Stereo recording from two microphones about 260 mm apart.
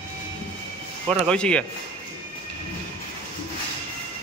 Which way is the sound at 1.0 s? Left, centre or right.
Centre.